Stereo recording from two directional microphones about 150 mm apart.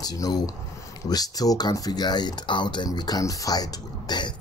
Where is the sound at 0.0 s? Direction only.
25° left (ahead or behind).